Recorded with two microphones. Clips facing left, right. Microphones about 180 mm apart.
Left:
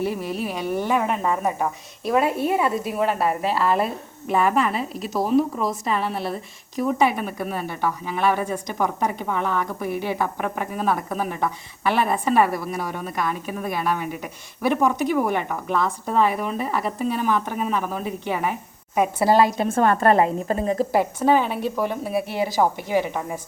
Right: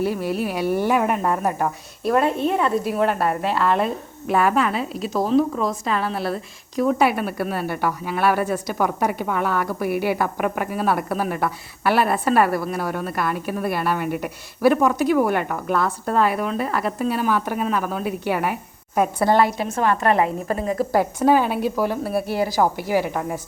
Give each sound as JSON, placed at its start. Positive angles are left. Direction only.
{"t": 0.0, "sound": "speech", "side_deg": 0}
{"t": 19.5, "sound": "a woman's voice", "side_deg": 45}
{"t": 20.9, "sound": "speech", "side_deg": 5}
{"t": 21.2, "sound": "speech", "side_deg": -10}